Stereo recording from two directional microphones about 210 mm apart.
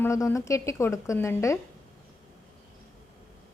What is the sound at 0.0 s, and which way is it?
A woman's voice, 10° left (ahead or behind).